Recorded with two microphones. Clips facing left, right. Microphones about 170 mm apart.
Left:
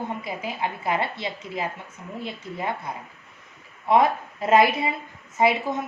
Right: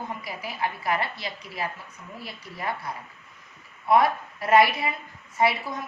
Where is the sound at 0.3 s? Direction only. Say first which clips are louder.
Left 2 dB; 25° left (ahead or behind).